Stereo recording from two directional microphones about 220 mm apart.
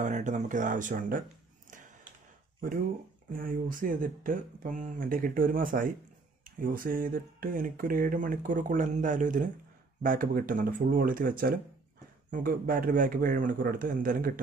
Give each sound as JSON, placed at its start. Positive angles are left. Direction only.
{"t": 0.0, "sound": "speech", "side_deg": -35}
{"t": 2.6, "sound": "speech", "side_deg": -40}